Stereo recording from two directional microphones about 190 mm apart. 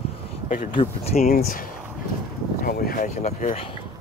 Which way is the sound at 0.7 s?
30° left (ahead or behind).